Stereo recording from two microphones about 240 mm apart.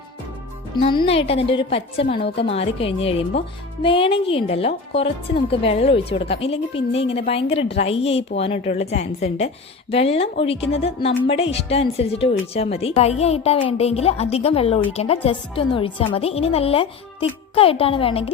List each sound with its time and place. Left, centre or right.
0.8 s a woman's voice: left